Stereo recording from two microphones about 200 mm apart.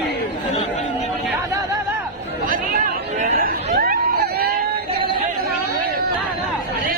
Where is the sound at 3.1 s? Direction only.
40° right (ahead or behind).